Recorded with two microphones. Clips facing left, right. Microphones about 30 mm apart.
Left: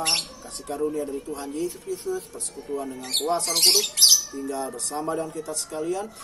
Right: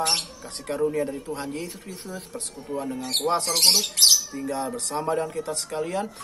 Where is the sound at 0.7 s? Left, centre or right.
Right.